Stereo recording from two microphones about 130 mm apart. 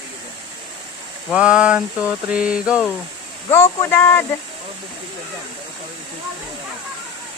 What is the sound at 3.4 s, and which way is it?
Speech, 25° left (ahead or behind).